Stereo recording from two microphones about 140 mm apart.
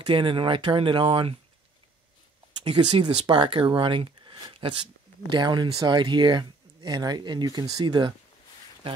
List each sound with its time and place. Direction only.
0.0 s speech: 35° right (ahead or behind)
2.6 s speech: 35° right (ahead or behind)